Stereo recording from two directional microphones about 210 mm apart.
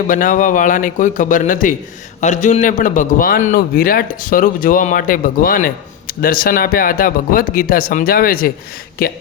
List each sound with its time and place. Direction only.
0.1 s a man's voice: 40° left (ahead or behind)